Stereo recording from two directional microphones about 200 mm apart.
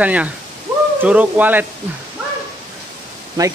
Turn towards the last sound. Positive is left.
turn(degrees=-20)  # may be behind; listen again after turning